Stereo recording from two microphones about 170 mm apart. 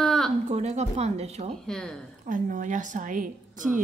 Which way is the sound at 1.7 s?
5° left (ahead or behind).